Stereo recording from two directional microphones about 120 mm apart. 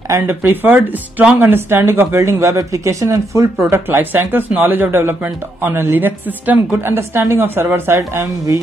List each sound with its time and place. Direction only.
0.1 s speech: 20° right (ahead or behind)